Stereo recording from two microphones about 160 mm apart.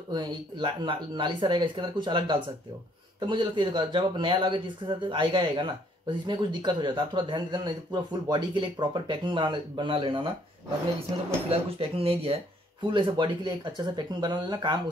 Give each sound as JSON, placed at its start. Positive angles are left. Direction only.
{"t": 0.1, "sound": "speech", "side_deg": -30}
{"t": 11.4, "sound": "speech", "side_deg": -35}